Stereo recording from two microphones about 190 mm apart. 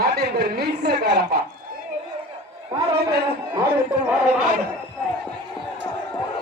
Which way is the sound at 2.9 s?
60° right (ahead or behind).